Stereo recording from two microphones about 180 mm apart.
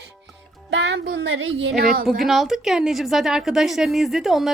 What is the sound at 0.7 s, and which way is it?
Child singing, 80° right.